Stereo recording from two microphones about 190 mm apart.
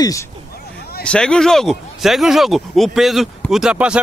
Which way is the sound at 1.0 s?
5° left (ahead or behind).